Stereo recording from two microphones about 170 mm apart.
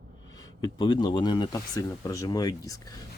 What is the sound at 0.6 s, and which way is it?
Speech, 25° left (ahead or behind).